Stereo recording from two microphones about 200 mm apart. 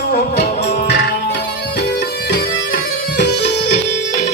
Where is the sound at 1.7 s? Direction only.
55° left (ahead or behind).